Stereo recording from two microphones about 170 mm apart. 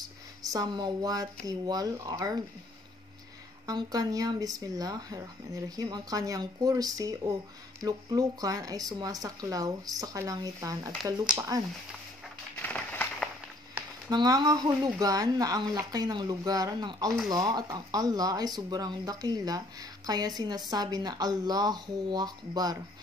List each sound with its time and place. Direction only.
0.5 s speech: 25° right (ahead or behind)
3.6 s speech: 25° right (ahead or behind)
12.6 s a sound: 10° left (ahead or behind)
14.1 s speech: 20° right (ahead or behind)